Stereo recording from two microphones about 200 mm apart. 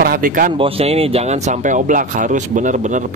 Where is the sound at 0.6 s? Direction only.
30° right (ahead or behind).